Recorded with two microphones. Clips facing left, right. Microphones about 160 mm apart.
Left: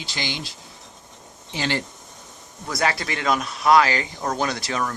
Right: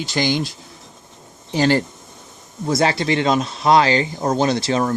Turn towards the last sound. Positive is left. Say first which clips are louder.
# right 7 dB
turn(degrees=-30)  # may be behind; listen again after turning